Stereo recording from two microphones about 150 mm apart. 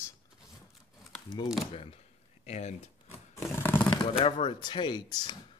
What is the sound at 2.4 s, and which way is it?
Speech, 50° left (ahead or behind).